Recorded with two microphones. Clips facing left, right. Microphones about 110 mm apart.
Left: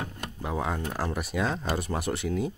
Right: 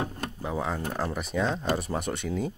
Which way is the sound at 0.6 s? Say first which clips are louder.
Even; centre (ahead or behind).